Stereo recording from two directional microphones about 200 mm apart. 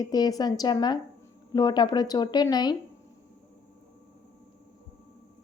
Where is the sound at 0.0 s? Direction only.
20° left (ahead or behind).